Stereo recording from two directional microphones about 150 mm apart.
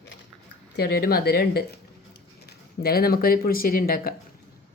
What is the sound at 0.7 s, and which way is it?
Speech, 90° left.